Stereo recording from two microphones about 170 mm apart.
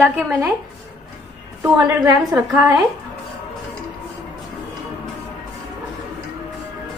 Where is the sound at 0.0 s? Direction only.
10° right (ahead or behind).